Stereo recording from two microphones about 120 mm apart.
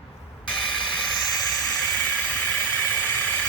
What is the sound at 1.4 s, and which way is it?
Vehicle, 10° left (ahead or behind).